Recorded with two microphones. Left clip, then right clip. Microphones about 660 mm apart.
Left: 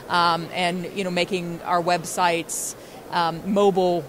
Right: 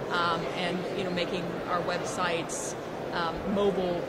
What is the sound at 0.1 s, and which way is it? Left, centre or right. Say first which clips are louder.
A woman's voice: left 8 dB; left.